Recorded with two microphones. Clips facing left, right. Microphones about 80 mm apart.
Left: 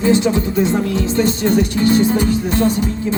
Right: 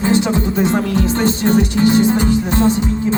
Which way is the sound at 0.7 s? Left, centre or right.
Right.